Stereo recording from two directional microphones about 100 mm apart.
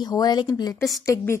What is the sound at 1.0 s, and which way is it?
Speech, 30° left (ahead or behind).